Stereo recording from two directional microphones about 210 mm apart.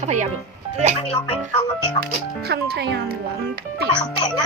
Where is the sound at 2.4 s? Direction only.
50° right (ahead or behind).